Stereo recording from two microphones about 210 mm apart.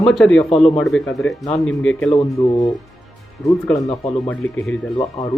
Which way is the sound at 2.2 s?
15° left (ahead or behind).